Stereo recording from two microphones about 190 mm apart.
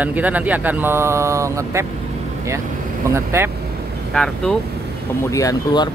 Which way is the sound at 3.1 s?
15° right (ahead or behind).